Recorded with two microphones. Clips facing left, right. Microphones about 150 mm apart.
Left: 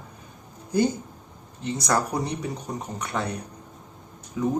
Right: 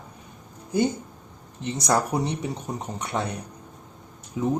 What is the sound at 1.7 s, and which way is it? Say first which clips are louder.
Speech: right 2 dB; 25° right (ahead or behind).